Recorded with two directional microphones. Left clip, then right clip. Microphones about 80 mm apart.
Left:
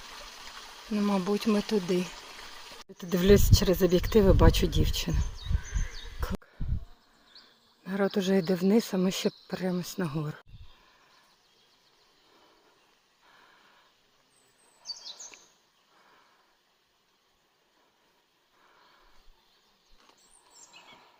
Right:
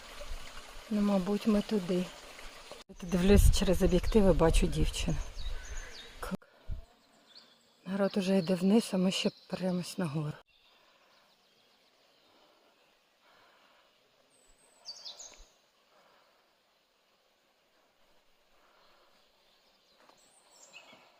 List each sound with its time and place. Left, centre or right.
0.0 s trickle: centre
0.9 s speech: centre
1.5 s speech: left
2.0 s a sound: centre
3.0 s speech: centre
6.1 s a sound: centre
7.9 s speech: left